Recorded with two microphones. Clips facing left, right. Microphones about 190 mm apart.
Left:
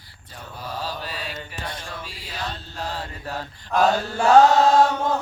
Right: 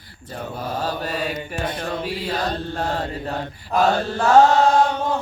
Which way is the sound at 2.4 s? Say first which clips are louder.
Right 4 dB; 40° right (ahead or behind).